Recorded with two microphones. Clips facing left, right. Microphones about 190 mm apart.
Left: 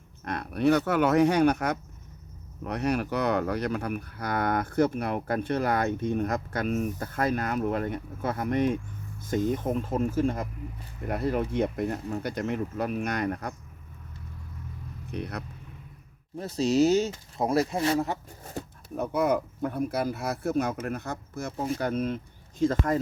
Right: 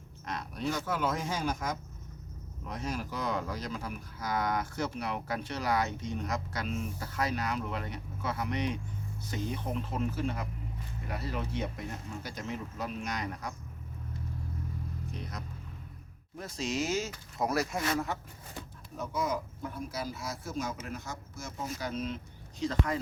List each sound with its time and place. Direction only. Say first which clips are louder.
0.3 s speech: left 11 dB; 60° left (ahead or behind)
15.1 s speech: left 12 dB; 65° left (ahead or behind)
16.4 s speech: left 11 dB; 35° left (ahead or behind)
18.9 s speech: left 8 dB; 60° left (ahead or behind)